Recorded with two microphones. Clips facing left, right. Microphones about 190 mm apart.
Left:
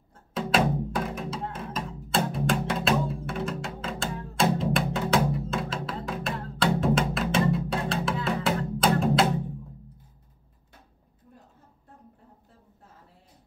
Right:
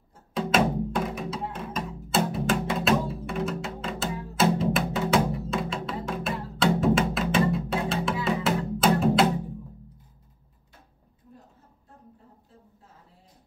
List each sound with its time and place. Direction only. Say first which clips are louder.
0.3 s music: right 1 dB; centre (ahead or behind)